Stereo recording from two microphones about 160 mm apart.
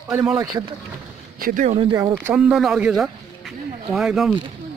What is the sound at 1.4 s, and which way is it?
Speech, 55° right (ahead or behind).